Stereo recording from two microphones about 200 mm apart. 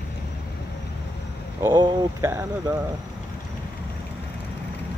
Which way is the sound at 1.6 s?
20° right (ahead or behind).